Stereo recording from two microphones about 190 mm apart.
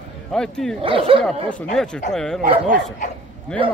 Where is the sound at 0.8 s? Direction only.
30° right (ahead or behind).